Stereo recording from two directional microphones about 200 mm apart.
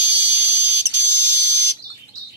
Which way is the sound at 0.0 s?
10° right (ahead or behind).